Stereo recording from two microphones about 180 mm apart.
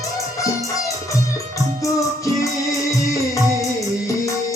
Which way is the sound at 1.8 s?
20° left (ahead or behind).